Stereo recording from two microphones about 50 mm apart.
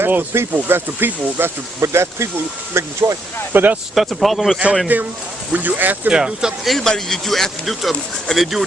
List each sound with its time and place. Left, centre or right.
0.0 s speech: right
1.8 s speech: right
3.5 s speech: right
3.9 s speech: centre
4.9 s speech: right
6.1 s speech: centre
6.7 s speech: centre